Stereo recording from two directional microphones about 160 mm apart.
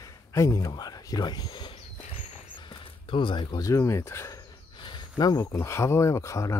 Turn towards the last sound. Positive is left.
turn(degrees=20)  # may be behind; listen again after turning